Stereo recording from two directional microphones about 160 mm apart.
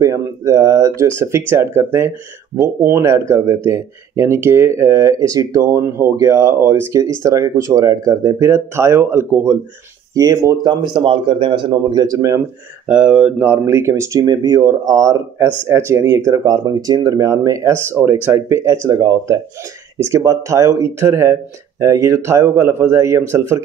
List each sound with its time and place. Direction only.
0.0 s speech: 20° right (ahead or behind)
12.8 s speech: 5° right (ahead or behind)